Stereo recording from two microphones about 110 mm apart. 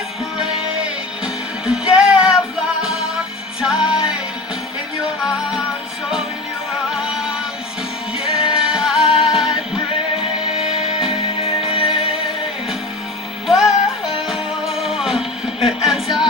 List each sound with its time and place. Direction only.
0.3 s music: 5° right (ahead or behind)
5.2 s music: 5° right (ahead or behind)
6.9 s music: 5° right (ahead or behind)
11.4 s music: 55° left (ahead or behind)
13.5 s music: 5° right (ahead or behind)